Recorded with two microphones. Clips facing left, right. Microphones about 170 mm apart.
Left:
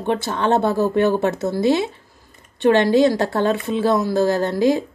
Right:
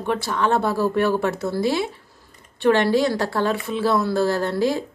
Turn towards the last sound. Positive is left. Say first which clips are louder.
# left 4 dB
turn(degrees=20)  # may be behind; listen again after turning